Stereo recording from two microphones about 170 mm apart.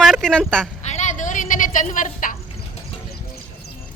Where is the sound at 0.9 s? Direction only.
45° left (ahead or behind).